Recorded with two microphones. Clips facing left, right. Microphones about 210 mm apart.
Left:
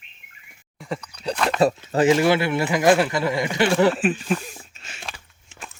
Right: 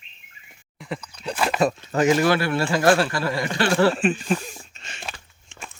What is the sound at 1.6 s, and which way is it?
A man's voice, 30° left (ahead or behind).